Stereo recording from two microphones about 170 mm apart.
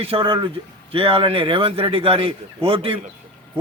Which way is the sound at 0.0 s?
30° right (ahead or behind).